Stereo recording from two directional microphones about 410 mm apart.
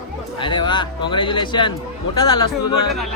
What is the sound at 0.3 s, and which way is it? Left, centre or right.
A man's voice, centre.